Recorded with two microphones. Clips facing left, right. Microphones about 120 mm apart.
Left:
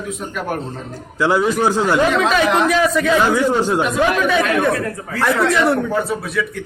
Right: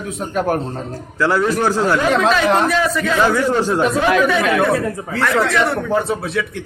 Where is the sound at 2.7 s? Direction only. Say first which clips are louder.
Left 2 dB; centre (ahead or behind).